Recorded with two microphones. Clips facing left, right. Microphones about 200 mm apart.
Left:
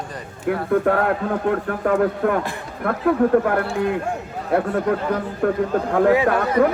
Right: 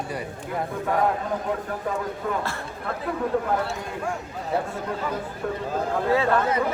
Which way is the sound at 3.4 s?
65° left (ahead or behind).